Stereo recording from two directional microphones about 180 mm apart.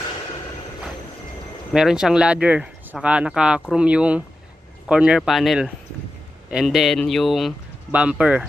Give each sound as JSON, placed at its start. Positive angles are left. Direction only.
{"t": 1.7, "sound": "speech", "side_deg": -5}